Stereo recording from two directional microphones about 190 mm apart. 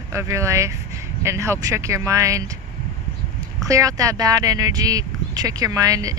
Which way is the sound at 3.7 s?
15° right (ahead or behind).